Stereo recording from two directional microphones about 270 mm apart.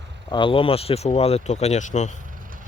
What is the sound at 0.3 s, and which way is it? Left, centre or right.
Speech, centre.